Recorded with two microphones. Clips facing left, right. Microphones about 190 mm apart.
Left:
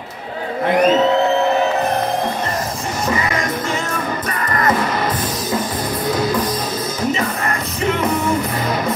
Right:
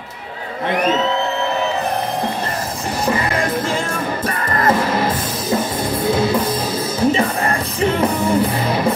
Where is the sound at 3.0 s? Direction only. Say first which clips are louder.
Right 2 dB; 30° right (ahead or behind).